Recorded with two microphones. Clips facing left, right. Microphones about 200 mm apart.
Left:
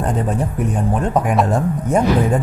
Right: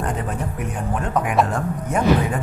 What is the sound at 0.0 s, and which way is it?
Speech, 35° left (ahead or behind).